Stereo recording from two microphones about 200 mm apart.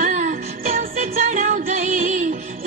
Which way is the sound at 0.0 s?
40° right (ahead or behind).